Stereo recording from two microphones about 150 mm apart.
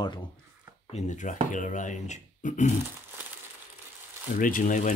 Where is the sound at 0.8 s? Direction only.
50° left (ahead or behind).